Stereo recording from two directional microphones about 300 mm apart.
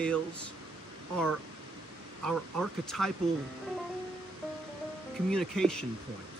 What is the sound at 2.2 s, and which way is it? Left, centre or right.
Speech, centre.